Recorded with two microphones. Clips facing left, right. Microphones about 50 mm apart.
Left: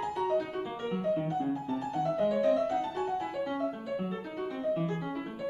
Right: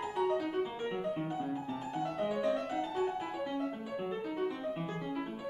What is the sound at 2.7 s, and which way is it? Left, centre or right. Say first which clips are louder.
Music: left 2 dB; centre.